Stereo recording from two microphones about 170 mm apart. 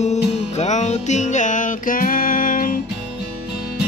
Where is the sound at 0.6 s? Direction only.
45° left (ahead or behind).